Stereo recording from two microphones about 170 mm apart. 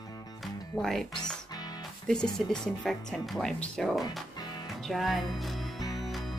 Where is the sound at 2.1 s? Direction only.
5° left (ahead or behind).